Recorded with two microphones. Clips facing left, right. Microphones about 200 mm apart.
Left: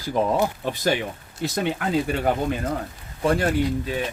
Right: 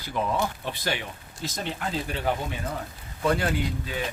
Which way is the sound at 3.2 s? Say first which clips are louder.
Left 4 dB; 45° left (ahead or behind).